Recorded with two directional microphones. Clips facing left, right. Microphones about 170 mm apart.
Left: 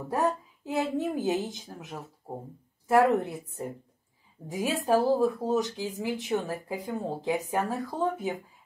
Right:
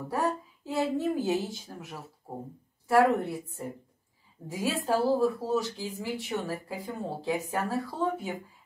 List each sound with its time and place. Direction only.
0.1 s speech: 20° left (ahead or behind)
2.3 s speech: 40° left (ahead or behind)
2.9 s speech: 20° left (ahead or behind)